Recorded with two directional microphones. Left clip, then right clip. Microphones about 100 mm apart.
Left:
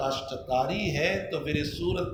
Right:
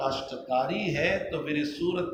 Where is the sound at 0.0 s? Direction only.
85° left.